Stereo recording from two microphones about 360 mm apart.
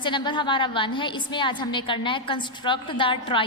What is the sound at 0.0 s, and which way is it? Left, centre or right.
A woman's voice, centre.